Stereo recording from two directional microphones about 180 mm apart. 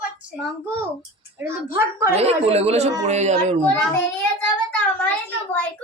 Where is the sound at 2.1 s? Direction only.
35° right (ahead or behind).